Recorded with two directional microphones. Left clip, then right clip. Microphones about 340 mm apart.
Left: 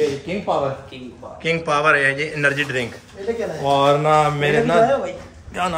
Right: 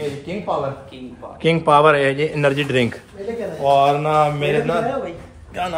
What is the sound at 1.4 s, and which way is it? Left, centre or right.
A man's voice, centre.